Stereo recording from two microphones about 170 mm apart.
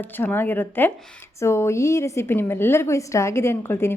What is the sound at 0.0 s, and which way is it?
A woman's voice, 10° left (ahead or behind).